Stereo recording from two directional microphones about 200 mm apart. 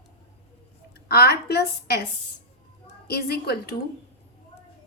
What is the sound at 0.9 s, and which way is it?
A woman's voice, 55° left (ahead or behind).